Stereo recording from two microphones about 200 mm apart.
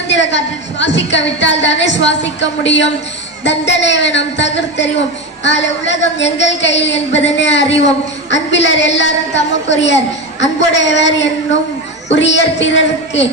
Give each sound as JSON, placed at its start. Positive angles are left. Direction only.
{"t": 0.1, "sound": "a woman's voice", "side_deg": 65}